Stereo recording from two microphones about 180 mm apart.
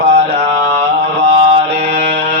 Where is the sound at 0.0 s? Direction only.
65° right (ahead or behind).